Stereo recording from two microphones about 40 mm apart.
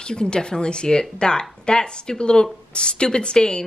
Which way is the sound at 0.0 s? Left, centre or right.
Left.